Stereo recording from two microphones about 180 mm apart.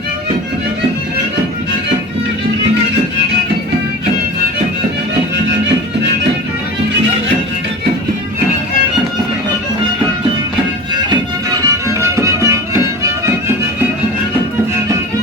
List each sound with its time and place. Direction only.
11.6 s music: 15° right (ahead or behind)